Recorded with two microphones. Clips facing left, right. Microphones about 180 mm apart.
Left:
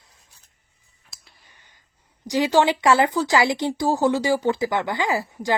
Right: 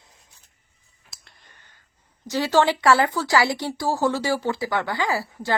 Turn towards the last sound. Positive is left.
turn(degrees=20)  # may be behind; listen again after turning